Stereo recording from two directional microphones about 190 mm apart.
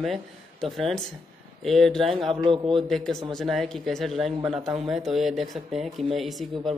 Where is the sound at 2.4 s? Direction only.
25° right (ahead or behind).